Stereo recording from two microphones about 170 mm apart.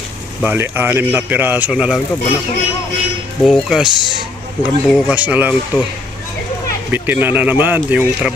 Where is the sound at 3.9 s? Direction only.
25° left (ahead or behind).